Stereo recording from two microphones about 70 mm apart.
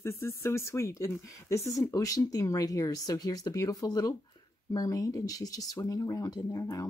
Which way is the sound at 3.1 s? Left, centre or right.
Left.